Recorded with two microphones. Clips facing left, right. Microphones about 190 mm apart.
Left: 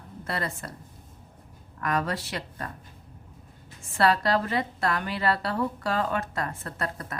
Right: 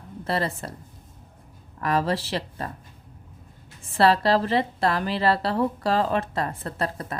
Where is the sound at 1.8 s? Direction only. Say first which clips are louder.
Right 4 dB; 30° right (ahead or behind).